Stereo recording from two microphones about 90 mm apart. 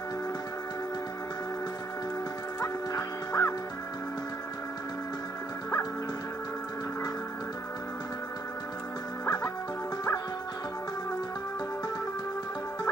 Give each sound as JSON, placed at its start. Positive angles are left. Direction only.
{"t": 2.6, "sound": "music", "side_deg": 40}